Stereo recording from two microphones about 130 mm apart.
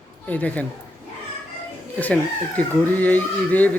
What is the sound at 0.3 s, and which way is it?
Speech, 10° left (ahead or behind).